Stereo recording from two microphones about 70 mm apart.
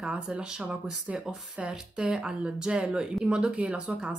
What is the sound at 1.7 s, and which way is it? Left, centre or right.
A woman's voice, centre.